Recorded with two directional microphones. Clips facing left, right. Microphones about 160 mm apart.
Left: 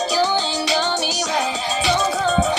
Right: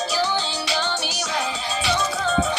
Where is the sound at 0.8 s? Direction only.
45° left (ahead or behind).